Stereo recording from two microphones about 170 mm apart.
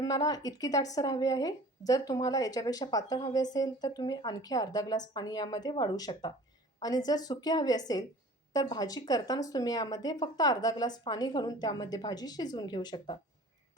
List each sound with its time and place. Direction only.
0.0 s speech: 20° left (ahead or behind)